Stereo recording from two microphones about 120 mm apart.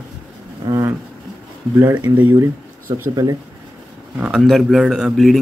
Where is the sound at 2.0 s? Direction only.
15° right (ahead or behind).